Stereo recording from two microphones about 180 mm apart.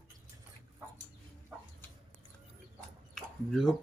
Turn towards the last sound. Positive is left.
turn(degrees=0)  # may be behind; listen again after turning